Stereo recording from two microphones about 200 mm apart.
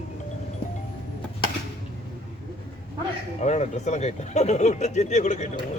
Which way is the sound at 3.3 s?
35° left (ahead or behind).